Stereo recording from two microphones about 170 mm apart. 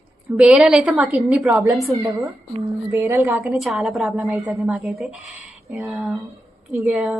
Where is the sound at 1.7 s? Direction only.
Centre (ahead or behind).